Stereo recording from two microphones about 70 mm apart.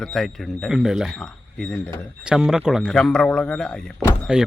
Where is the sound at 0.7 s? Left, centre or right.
Centre.